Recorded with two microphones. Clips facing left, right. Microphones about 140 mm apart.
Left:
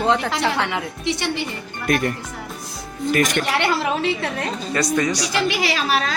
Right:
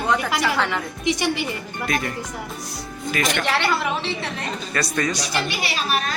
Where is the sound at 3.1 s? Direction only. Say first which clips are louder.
Left 5 dB; 50° left (ahead or behind).